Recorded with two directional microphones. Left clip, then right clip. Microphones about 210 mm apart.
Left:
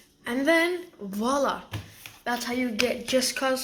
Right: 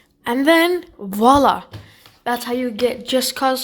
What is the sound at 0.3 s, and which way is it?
Speech, 55° right (ahead or behind).